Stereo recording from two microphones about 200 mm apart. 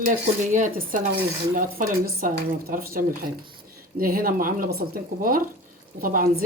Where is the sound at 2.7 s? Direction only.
45° right (ahead or behind).